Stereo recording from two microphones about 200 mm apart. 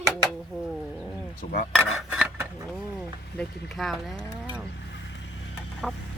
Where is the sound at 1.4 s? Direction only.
45° left (ahead or behind).